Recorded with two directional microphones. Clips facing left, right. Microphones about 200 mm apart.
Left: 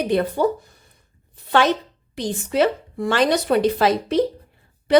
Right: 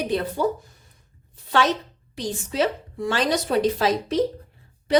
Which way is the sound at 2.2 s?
60° left (ahead or behind).